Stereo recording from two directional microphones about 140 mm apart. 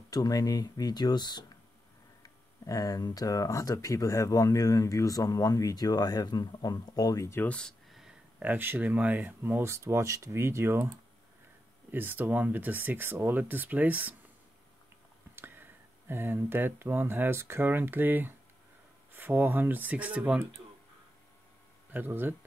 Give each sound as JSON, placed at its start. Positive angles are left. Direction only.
{"t": 0.1, "sound": "speech", "side_deg": 25}
{"t": 11.9, "sound": "speech", "side_deg": -15}
{"t": 15.3, "sound": "speech", "side_deg": -15}
{"t": 21.9, "sound": "speech", "side_deg": -15}